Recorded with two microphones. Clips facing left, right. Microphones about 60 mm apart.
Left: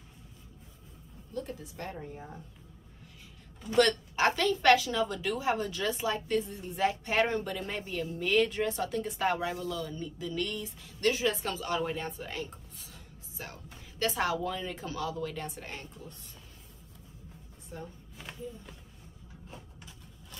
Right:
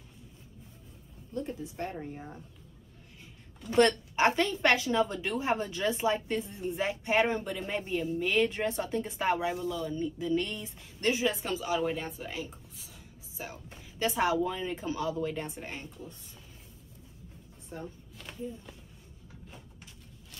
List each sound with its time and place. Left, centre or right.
1.3 s a woman's voice: right
2.0 s speech: centre
3.7 s a woman's voice: right
11.4 s speech: centre
17.7 s speech: centre